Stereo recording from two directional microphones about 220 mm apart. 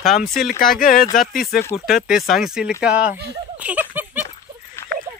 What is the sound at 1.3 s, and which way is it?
Speech, 40° left (ahead or behind).